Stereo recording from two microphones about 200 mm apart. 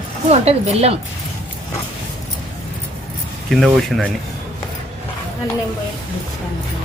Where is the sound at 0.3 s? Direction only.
30° right (ahead or behind).